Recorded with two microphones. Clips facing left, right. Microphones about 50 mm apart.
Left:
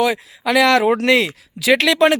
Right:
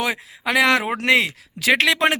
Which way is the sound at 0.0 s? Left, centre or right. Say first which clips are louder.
Left 5 dB; right.